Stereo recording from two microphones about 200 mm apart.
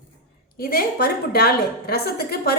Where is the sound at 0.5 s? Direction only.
50° left (ahead or behind).